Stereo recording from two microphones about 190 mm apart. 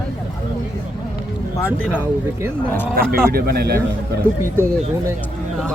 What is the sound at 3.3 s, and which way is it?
Speech, 55° right (ahead or behind).